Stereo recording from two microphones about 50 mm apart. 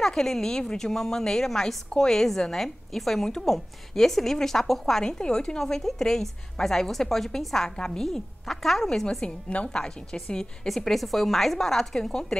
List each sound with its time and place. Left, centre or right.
0.0 s a woman's voice: centre
9.2 s a woman's voice: left